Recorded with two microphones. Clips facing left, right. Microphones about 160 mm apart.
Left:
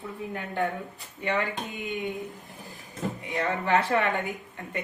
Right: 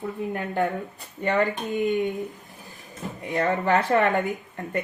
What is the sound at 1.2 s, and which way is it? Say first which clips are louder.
Speech: right 5 dB; 45° right (ahead or behind).